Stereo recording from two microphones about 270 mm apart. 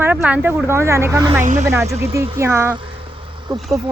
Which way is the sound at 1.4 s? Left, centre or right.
Right.